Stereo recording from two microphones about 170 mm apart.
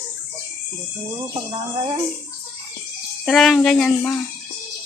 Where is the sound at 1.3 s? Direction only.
25° right (ahead or behind).